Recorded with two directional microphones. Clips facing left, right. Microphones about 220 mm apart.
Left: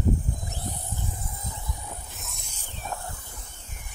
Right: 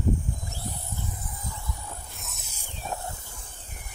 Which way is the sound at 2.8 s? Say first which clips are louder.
Right 1 dB; 20° right (ahead or behind).